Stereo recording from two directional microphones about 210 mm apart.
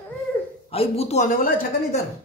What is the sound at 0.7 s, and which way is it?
Speech, 30° left (ahead or behind).